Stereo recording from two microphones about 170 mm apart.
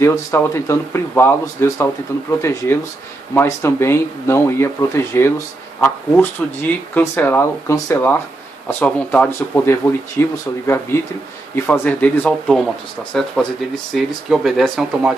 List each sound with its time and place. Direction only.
0.0 s speech: 15° left (ahead or behind); by 15.1 s centre (ahead or behind)